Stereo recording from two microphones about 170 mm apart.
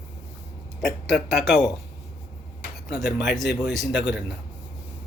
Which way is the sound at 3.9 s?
90° left.